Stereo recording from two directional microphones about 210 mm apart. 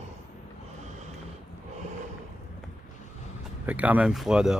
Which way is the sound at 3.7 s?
5° right (ahead or behind).